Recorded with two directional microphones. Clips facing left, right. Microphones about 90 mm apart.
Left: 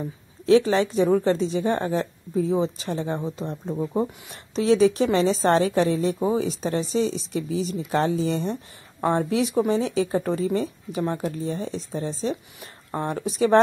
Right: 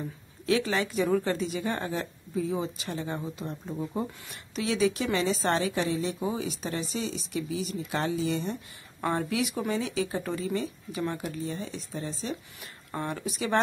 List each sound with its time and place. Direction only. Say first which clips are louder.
0.5 s speech: left 9 dB; 30° left (ahead or behind)